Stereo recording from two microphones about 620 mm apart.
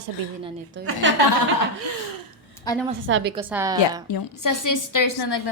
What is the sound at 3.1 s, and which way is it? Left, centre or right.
Speech, centre.